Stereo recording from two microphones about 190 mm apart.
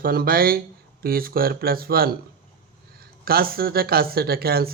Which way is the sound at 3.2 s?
50° right (ahead or behind).